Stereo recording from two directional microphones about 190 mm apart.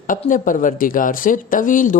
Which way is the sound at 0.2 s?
45° left (ahead or behind).